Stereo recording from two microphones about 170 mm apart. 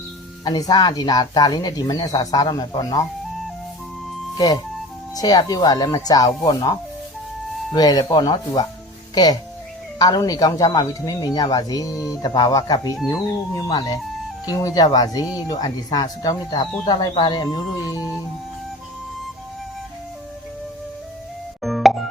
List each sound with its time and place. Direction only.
0.4 s speech: 25° left (ahead or behind)
5.1 s speech: 20° left (ahead or behind)
21.6 s plop: centre (ahead or behind)